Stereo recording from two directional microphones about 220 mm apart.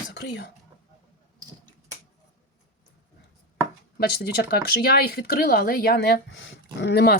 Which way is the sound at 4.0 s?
45° left (ahead or behind).